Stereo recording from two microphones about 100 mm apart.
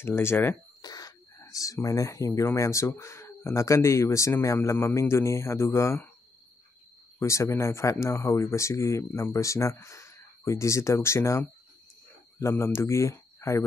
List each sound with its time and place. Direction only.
0.0 s speech: 25° left (ahead or behind)
0.8 s a sound: 40° left (ahead or behind)
1.4 s speech: 35° left (ahead or behind)
7.2 s speech: 30° left (ahead or behind)